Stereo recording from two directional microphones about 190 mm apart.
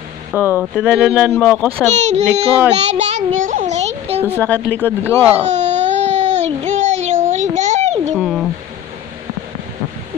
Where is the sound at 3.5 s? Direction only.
40° right (ahead or behind).